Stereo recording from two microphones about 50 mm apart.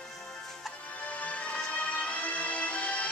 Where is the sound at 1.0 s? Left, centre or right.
Left.